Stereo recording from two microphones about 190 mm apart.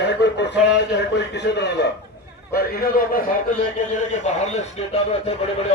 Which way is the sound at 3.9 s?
40° left (ahead or behind).